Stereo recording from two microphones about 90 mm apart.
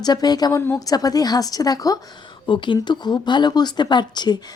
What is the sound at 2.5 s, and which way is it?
Speech, 60° left (ahead or behind).